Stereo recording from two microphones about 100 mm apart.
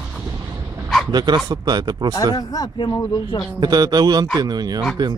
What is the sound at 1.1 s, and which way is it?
Speech, 45° right (ahead or behind).